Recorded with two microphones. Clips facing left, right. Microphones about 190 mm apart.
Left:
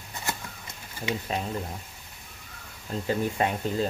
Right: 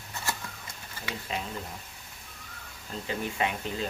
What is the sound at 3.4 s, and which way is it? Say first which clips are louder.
Speech: left 5 dB; 40° left (ahead or behind).